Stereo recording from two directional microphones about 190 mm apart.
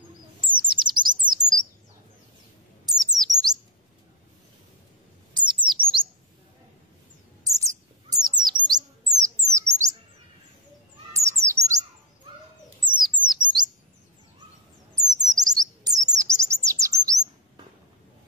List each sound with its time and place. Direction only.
0.4 s chirp: 25° right (ahead or behind)
2.9 s chirp: 20° right (ahead or behind)
5.3 s chirp: 25° right (ahead or behind)
7.4 s bird: 15° right (ahead or behind)
11.1 s bird: 15° right (ahead or behind)
12.8 s bird: 25° right (ahead or behind)
15.2 s bird: 20° right (ahead or behind)
16.1 s chirp: 15° right (ahead or behind)
16.8 s bird: 15° right (ahead or behind)